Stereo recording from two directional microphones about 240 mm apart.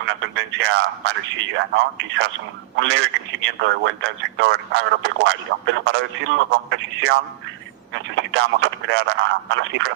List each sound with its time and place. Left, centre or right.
0.0 s speech: right